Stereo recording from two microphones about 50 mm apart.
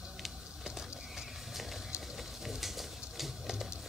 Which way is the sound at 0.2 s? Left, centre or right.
Centre.